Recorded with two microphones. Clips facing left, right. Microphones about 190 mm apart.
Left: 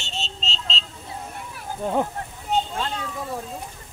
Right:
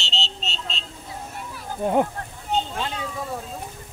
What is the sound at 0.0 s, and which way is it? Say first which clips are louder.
Vehicle: right 1 dB; 70° right (ahead or behind).